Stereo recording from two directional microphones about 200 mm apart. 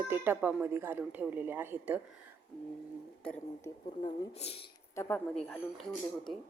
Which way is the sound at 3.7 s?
15° left (ahead or behind).